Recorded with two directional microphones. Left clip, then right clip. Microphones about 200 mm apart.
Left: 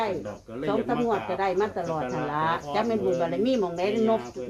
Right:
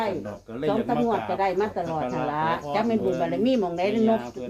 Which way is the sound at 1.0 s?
10° left (ahead or behind).